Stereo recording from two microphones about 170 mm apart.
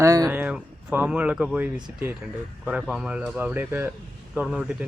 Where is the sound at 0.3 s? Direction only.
5° right (ahead or behind).